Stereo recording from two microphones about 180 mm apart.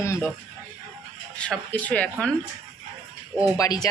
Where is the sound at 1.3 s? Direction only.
5° left (ahead or behind).